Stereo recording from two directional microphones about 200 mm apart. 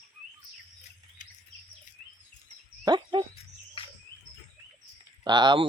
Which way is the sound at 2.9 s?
20° right (ahead or behind).